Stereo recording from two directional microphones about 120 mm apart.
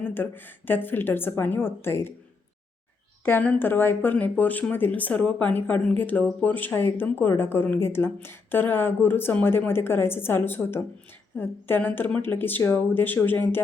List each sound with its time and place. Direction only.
0.0 s speech: 15° left (ahead or behind)
3.2 s speech: 15° left (ahead or behind)